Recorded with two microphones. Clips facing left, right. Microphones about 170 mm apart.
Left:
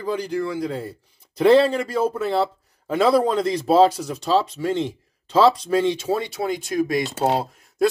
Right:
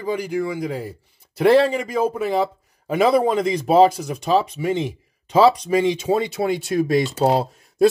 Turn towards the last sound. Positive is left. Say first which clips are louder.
# right 4 dB
turn(degrees=-25)  # may be behind; listen again after turning